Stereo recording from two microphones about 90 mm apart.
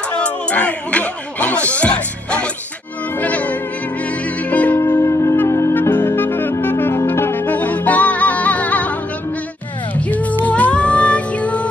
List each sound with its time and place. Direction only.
0.2 s speech: 15° left (ahead or behind)
3.2 s music: 15° left (ahead or behind)
4.7 s music: 30° left (ahead or behind)
9.9 s music: 15° left (ahead or behind)